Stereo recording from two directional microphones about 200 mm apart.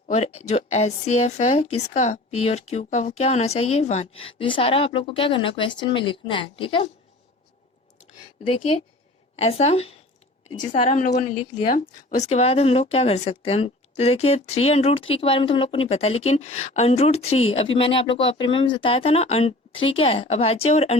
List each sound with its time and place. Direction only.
0.1 s a woman's voice: 30° left (ahead or behind)
9.3 s a woman's voice: 30° left (ahead or behind)